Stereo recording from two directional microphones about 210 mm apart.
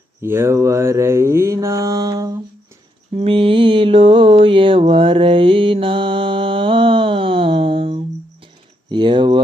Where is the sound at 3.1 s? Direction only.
30° right (ahead or behind).